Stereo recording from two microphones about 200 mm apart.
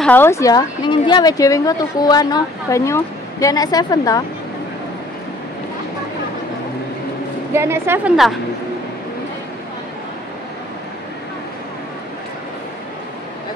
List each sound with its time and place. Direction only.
0.0 s speech: 10° left (ahead or behind)
7.5 s a woman's voice: 10° right (ahead or behind)